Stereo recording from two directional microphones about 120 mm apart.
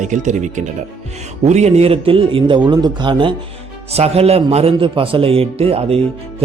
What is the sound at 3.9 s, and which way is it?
Speech, 60° right (ahead or behind).